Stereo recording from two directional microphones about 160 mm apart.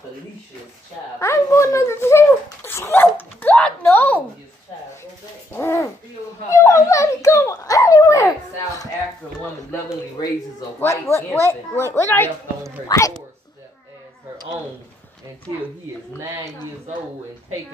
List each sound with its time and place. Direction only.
1.2 s dog: 15° left (ahead or behind)
5.5 s owl: 15° left (ahead or behind)
6.5 s dog: 20° left (ahead or behind)
10.8 s a sound: 20° left (ahead or behind)